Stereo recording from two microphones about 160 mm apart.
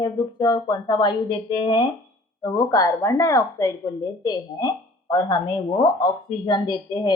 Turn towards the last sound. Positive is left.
turn(degrees=25)  # may be behind; listen again after turning